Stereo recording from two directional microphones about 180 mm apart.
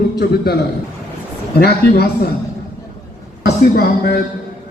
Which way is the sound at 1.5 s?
60° left (ahead or behind).